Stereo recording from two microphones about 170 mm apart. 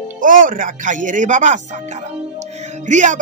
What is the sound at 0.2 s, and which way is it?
Speech, 50° right (ahead or behind).